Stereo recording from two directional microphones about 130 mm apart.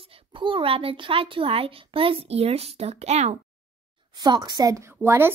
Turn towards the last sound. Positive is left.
turn(degrees=-15)  # may be behind; listen again after turning